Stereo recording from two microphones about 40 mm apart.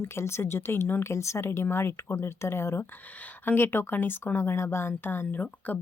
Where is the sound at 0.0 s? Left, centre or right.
Left.